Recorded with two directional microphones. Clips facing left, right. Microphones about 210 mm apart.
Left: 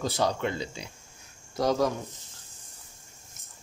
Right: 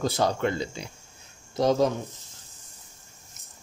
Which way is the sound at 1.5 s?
25° right (ahead or behind).